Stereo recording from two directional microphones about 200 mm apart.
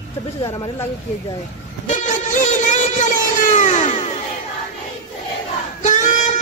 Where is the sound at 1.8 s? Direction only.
40° left (ahead or behind).